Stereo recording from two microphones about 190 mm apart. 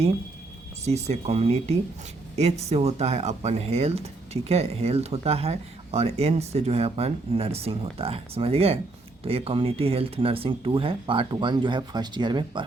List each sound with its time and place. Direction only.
0.9 s speech: 35° right (ahead or behind)